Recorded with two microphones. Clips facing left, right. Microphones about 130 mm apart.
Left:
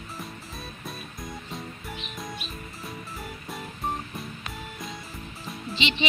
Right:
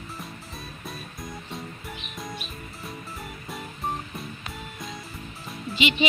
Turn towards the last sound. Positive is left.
turn(degrees=-5)  # may be behind; listen again after turning